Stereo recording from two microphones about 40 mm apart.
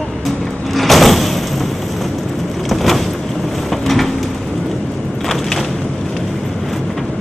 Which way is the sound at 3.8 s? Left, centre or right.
Centre.